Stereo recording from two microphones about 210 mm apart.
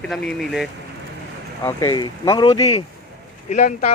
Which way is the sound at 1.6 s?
15° left (ahead or behind).